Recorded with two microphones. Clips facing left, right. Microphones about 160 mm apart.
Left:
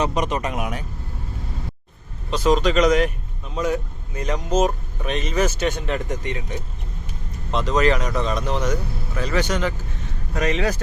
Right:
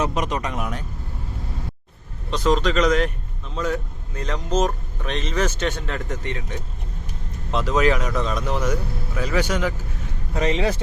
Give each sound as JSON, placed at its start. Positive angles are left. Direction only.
{"t": 0.0, "sound": "speech", "side_deg": 0}
{"t": 2.3, "sound": "speech", "side_deg": 10}
{"t": 7.5, "sound": "speech", "side_deg": -5}
{"t": 10.3, "sound": "speech", "side_deg": -25}